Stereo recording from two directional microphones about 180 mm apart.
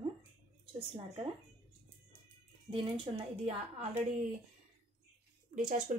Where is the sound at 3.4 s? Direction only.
35° right (ahead or behind).